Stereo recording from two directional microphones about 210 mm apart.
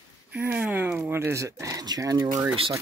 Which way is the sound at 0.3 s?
5° right (ahead or behind).